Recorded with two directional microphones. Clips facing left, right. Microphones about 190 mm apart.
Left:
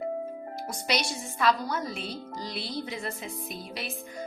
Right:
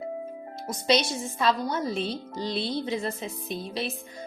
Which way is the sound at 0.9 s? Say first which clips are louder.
Right 7 dB; 25° right (ahead or behind).